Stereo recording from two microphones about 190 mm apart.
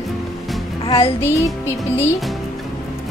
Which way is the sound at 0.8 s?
25° left (ahead or behind).